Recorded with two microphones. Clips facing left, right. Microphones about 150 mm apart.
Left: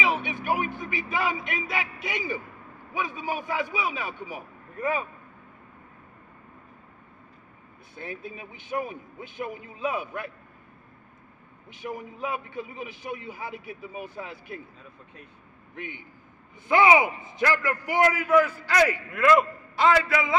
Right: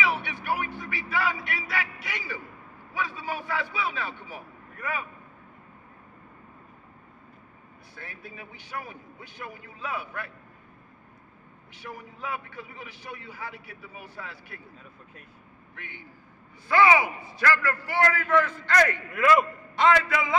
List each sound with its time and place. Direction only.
0.0 s a man's voice: 20° left (ahead or behind)
4.7 s a man's voice: 25° left (ahead or behind)
7.9 s a man's voice: 20° left (ahead or behind)
11.7 s a man's voice: 20° left (ahead or behind)
15.7 s a man's voice: 20° left (ahead or behind); by 20.3 s centre (ahead or behind)